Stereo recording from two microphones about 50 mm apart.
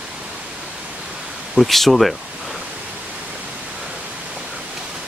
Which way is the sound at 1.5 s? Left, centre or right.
Centre.